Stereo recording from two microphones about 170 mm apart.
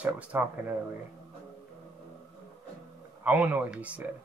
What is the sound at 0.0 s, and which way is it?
Speech, 10° right (ahead or behind).